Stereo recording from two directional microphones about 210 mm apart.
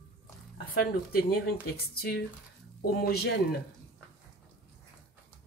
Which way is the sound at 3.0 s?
50° left (ahead or behind).